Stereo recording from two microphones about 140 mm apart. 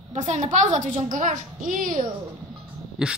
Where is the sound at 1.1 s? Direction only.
75° right (ahead or behind).